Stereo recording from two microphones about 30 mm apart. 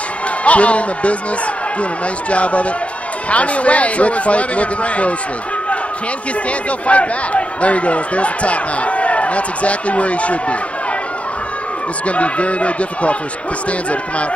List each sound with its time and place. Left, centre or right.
0.4 s a man's voice: left
6.9 s speech: left
12.1 s speech: left